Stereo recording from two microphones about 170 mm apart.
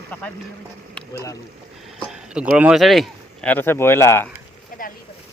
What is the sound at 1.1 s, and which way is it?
Speech, 20° left (ahead or behind).